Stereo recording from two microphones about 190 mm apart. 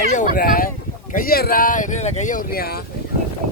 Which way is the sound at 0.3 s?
50° left (ahead or behind).